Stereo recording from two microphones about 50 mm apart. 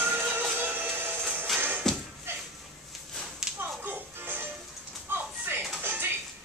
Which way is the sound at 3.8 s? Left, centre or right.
Right.